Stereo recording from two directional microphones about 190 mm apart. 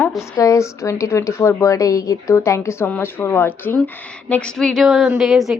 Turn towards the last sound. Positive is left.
turn(degrees=0)  # may be behind; listen again after turning